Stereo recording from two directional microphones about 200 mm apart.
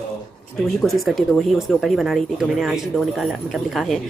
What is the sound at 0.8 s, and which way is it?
Speech, centre (ahead or behind).